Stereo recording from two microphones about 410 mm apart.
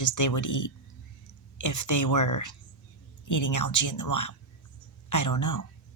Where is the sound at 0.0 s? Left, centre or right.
Left.